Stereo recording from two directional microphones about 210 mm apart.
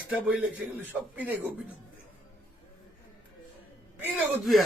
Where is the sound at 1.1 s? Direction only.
10° right (ahead or behind).